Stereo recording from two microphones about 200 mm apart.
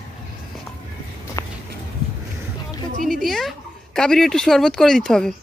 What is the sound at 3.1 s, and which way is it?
Speech, centre (ahead or behind).